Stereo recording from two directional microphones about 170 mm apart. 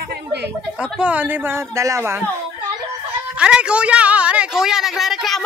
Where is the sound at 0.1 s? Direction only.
75° right (ahead or behind).